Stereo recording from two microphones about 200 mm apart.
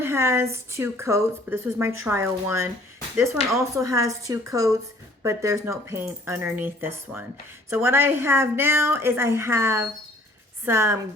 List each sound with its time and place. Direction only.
0.0 s a woman's voice: 10° right (ahead or behind)